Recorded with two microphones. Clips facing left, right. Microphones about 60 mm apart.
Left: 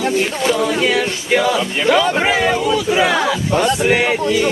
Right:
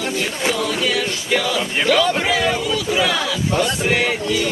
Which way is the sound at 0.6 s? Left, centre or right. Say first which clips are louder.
Left 4 dB; left.